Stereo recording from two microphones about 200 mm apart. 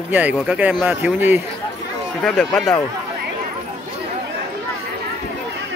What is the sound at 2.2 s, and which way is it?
Speech, centre (ahead or behind).